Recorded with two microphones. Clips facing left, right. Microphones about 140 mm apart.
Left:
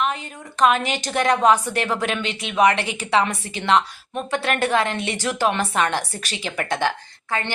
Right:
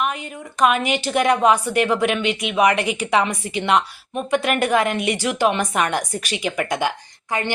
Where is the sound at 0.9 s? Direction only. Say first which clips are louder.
Right 2 dB; 10° right (ahead or behind).